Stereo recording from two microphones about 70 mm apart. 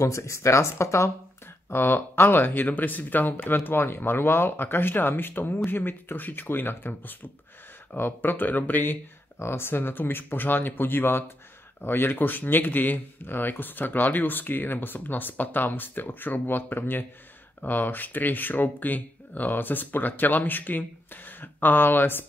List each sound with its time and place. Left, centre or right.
0.0 s speech: left
1.7 s speech: left